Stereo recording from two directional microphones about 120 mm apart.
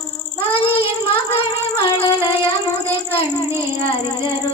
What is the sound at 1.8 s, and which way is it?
Music, 45° left (ahead or behind).